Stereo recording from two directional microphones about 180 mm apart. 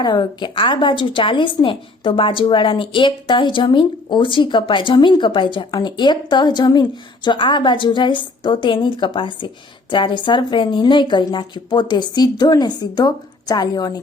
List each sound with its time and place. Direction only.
0.0 s a woman's voice: 25° left (ahead or behind)